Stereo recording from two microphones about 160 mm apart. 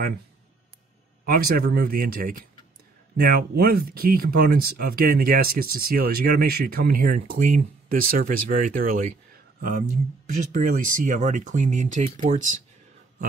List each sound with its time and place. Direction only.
1.2 s speech: 70° right (ahead or behind)
3.2 s speech: 75° right (ahead or behind); by 12.5 s 50° right (ahead or behind)